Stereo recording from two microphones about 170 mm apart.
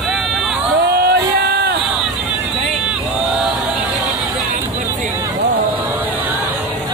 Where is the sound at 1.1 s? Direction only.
65° right (ahead or behind).